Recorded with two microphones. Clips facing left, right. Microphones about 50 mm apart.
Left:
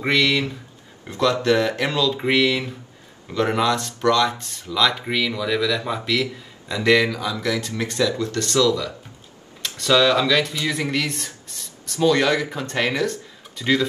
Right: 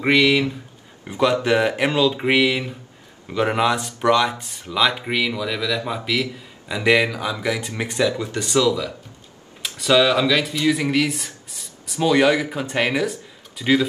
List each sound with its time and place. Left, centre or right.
0.0 s speech: centre